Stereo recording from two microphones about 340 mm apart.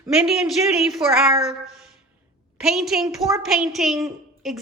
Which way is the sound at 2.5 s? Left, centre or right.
Centre.